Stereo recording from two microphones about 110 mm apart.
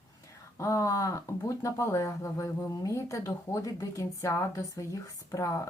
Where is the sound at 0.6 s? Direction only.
30° left (ahead or behind).